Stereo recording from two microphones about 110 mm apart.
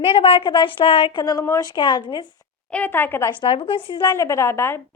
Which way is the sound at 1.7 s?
45° left (ahead or behind).